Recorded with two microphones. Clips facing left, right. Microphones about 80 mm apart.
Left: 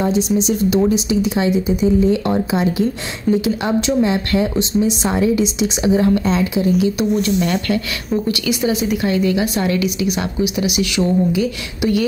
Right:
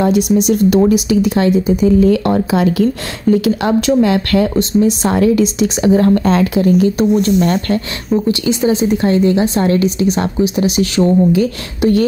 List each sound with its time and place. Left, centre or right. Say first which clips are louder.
0.0 s speech: right 4 dB; right
7.0 s a woman's voice: right 5 dB; right
8.1 s a woman's voice: right 5 dB; right